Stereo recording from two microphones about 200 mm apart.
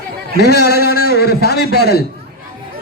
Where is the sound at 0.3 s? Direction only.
50° left (ahead or behind).